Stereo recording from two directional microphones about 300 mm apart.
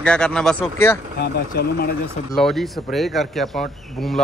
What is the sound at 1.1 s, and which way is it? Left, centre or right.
Speech, left.